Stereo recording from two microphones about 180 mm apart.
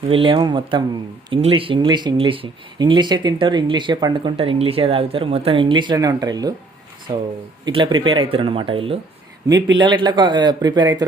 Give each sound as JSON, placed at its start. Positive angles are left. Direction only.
{"t": 0.1, "sound": "speech", "side_deg": -30}
{"t": 7.6, "sound": "speech", "side_deg": -25}